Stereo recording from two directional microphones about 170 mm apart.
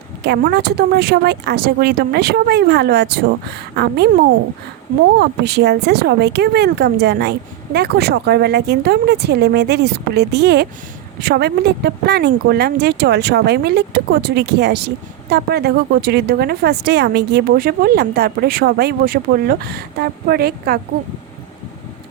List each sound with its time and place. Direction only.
0.2 s speech: 75° right (ahead or behind)
5.2 s speech: 75° right (ahead or behind)